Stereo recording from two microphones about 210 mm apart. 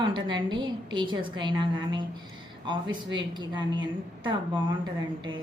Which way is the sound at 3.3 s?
20° right (ahead or behind).